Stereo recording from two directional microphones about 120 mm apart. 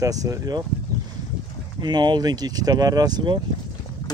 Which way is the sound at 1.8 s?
35° right (ahead or behind).